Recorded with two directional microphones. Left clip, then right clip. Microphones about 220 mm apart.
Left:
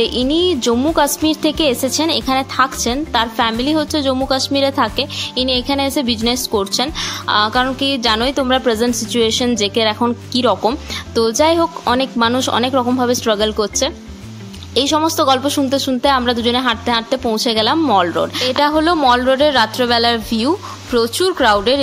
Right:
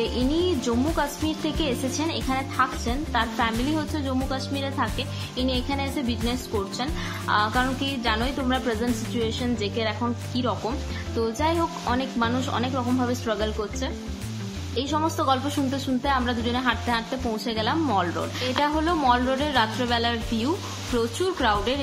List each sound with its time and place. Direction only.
0.0 s a woman's voice: 40° left (ahead or behind)